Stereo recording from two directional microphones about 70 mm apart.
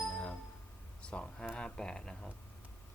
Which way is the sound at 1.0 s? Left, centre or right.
Centre.